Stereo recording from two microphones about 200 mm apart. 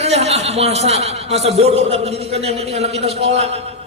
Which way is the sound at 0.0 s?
30° right (ahead or behind).